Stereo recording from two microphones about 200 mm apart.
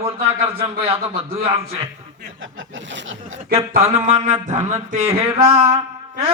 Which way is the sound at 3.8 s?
35° right (ahead or behind).